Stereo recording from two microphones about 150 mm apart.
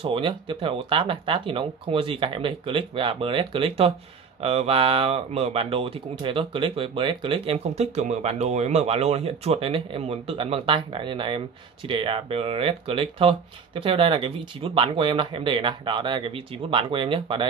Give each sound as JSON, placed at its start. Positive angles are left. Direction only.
{"t": 0.0, "sound": "speech", "side_deg": -35}